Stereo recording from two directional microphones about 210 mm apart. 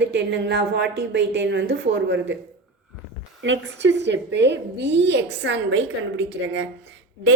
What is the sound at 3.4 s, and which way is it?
A woman's voice, 60° right (ahead or behind).